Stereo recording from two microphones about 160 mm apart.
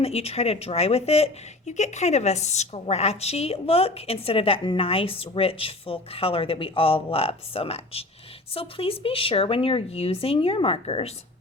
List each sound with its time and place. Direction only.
0.0 s speech: 40° left (ahead or behind)